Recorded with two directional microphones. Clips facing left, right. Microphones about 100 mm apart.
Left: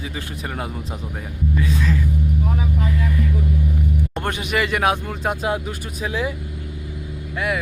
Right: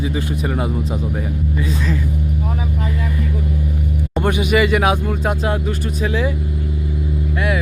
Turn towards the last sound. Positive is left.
turn(degrees=0)  # may be behind; listen again after turning